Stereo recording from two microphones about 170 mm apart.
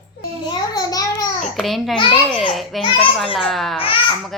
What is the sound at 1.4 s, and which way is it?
A child's voice, centre (ahead or behind).